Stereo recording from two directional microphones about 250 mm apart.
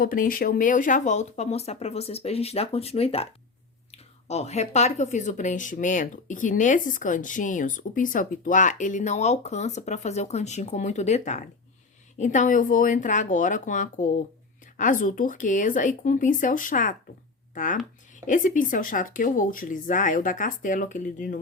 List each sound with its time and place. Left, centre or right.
0.0 s speech: left